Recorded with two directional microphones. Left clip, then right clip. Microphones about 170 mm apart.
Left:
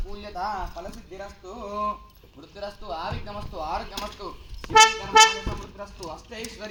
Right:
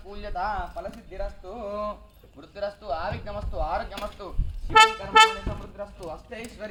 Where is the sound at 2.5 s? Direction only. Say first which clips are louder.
Right 3 dB; 25° left (ahead or behind).